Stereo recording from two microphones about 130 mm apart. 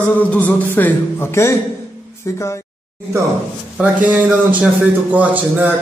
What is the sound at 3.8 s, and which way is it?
A man's voice, 10° right (ahead or behind).